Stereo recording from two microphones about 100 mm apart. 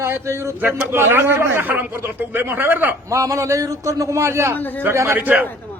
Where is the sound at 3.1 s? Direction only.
30° right (ahead or behind).